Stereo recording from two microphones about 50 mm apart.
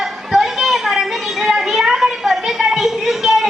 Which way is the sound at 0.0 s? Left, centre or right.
Centre.